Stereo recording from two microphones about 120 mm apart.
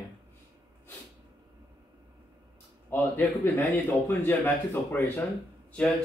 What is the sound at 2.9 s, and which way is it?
Speech, 20° left (ahead or behind).